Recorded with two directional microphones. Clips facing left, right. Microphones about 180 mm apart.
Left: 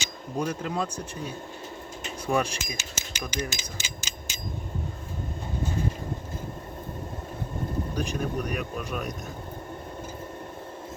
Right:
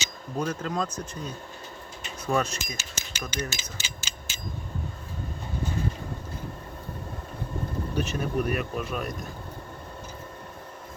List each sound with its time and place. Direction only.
0.0 s speech: 10° left (ahead or behind)
8.2 s speech: 5° right (ahead or behind)